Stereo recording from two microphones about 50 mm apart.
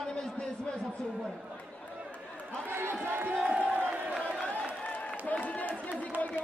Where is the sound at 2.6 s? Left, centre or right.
Right.